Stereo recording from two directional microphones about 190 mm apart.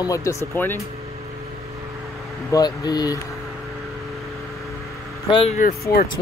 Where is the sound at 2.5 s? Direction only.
20° left (ahead or behind).